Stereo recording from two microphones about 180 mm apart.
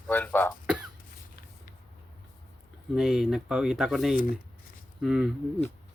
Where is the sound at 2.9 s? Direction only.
Centre (ahead or behind).